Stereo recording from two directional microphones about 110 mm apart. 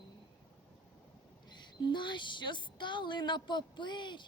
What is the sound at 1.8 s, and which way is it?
A woman's voice, 45° left (ahead or behind).